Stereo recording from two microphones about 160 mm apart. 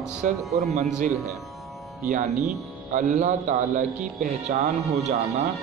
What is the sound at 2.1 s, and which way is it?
A man's voice, 50° right (ahead or behind).